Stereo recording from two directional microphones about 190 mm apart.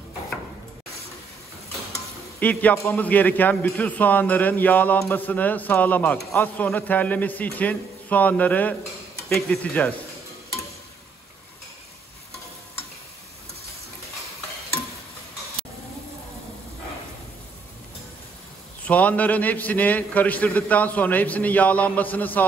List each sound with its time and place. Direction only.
2.4 s a man's voice: 10° left (ahead or behind)
18.9 s a man's voice: 10° left (ahead or behind)